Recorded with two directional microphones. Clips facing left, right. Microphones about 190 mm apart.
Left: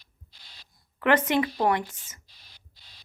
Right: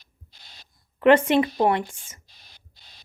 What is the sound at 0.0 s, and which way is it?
Owl, 45° right (ahead or behind).